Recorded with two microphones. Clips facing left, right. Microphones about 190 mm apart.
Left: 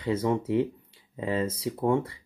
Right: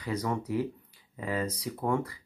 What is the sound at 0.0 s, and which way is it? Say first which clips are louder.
Speech: left 6 dB; 25° left (ahead or behind).